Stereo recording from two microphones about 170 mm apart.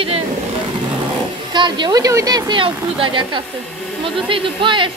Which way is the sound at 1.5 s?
25° right (ahead or behind).